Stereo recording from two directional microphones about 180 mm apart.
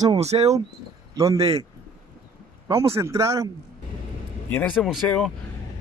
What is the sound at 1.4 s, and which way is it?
Speech, 35° right (ahead or behind).